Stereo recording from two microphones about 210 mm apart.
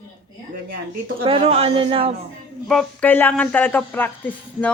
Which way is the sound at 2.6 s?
5° left (ahead or behind).